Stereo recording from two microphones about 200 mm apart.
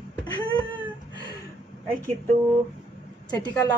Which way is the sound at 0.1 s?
20° left (ahead or behind).